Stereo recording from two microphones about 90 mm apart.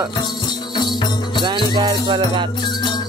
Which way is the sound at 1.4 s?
55° right (ahead or behind).